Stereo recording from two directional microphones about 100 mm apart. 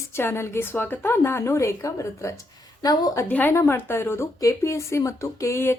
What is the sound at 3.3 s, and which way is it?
Speech, 15° left (ahead or behind).